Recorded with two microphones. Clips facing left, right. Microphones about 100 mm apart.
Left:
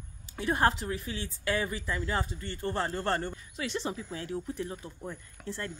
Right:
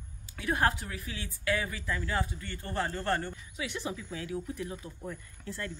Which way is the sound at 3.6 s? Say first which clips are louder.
Left 3 dB; 40° left (ahead or behind).